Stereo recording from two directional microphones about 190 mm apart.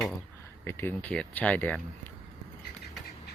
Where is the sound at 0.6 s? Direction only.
10° left (ahead or behind).